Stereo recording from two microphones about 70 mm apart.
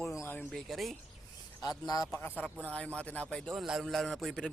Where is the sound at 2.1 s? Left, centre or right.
Left.